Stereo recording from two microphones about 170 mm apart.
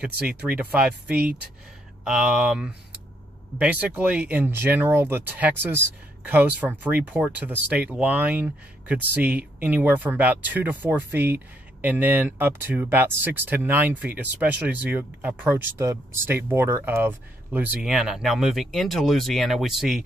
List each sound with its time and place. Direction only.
0.0 s speech: 5° right (ahead or behind)